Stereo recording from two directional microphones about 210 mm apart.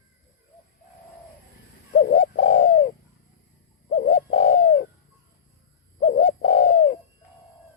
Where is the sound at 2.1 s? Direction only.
35° left (ahead or behind).